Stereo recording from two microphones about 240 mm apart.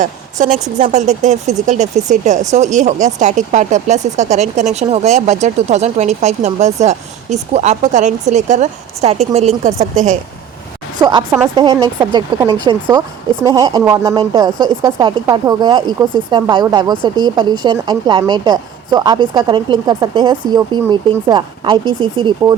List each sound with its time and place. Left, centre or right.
0.0 s a woman's voice: right
11.0 s speech: centre